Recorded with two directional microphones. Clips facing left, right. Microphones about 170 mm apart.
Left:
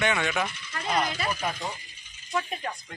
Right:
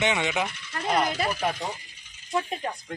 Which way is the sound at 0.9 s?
50° right (ahead or behind).